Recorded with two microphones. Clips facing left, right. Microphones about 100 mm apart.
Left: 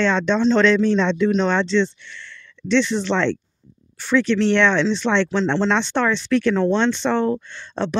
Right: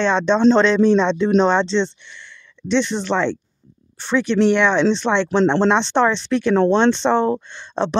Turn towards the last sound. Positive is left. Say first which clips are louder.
# right 3 dB
turn(degrees=-20)  # may be behind; listen again after turning